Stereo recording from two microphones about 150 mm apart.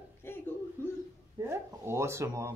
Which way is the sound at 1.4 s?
15° right (ahead or behind).